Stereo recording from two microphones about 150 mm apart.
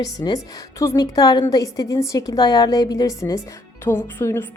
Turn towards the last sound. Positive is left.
turn(degrees=15)  # may be behind; listen again after turning